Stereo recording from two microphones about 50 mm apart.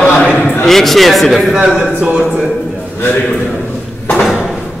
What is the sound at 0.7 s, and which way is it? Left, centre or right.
Mantra, centre.